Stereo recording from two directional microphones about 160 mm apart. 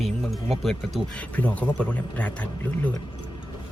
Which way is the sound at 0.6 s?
5° left (ahead or behind).